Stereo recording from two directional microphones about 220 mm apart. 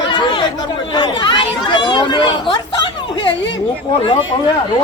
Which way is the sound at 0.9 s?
20° left (ahead or behind).